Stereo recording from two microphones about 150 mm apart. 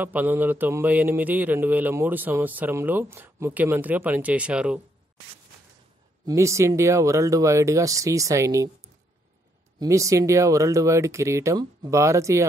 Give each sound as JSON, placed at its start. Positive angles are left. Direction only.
{"t": 0.0, "sound": "a man's voice", "side_deg": -10}
{"t": 6.2, "sound": "speech", "side_deg": -20}
{"t": 9.8, "sound": "speech", "side_deg": -20}